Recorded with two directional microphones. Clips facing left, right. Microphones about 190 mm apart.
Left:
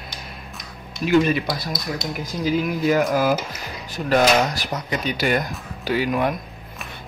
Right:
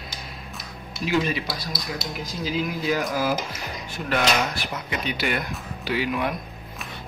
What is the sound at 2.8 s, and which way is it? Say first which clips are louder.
Speech: left 7 dB; 55° left (ahead or behind).